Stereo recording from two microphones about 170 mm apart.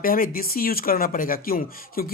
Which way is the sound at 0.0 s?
55° left (ahead or behind).